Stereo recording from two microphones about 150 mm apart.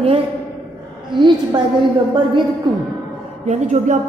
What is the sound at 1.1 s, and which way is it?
Speech, 30° right (ahead or behind).